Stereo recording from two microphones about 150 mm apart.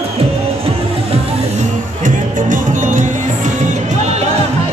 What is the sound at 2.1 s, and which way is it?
Music, 60° right (ahead or behind).